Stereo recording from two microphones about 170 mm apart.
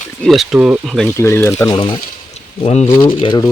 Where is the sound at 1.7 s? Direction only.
30° left (ahead or behind).